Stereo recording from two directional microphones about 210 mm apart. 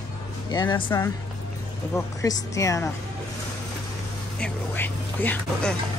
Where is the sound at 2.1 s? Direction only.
15° left (ahead or behind).